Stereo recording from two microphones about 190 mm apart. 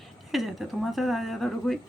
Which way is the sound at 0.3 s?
Centre (ahead or behind).